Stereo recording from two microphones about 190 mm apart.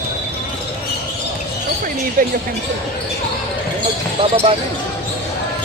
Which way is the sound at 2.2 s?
45° right (ahead or behind).